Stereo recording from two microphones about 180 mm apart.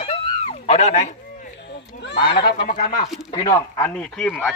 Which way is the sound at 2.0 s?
75° left (ahead or behind).